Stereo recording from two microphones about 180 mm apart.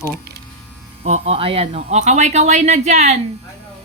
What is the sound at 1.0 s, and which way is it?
Speech, 35° right (ahead or behind).